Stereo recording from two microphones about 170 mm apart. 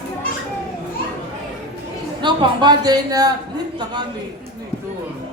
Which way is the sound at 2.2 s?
25° right (ahead or behind).